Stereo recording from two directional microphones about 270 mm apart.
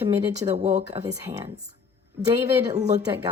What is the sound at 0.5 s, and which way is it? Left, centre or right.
Speech, right.